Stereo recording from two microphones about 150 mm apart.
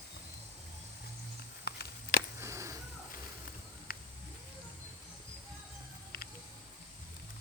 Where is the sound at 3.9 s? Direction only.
75° left (ahead or behind).